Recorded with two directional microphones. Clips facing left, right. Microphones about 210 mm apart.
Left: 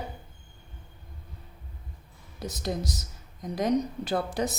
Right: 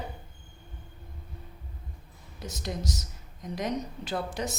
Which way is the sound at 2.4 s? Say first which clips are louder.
Left 3 dB; 35° left (ahead or behind).